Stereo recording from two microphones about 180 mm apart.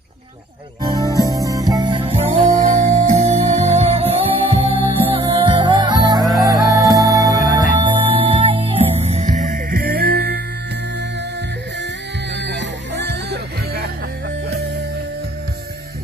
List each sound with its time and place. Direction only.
0.8 s music: 20° right (ahead or behind)
6.2 s music: centre (ahead or behind)
6.6 s music: 20° right (ahead or behind); by 10.4 s 60° right (ahead or behind)
12.4 s music: 75° right (ahead or behind)